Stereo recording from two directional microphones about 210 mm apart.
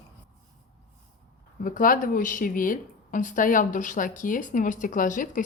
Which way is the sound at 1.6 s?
40° left (ahead or behind).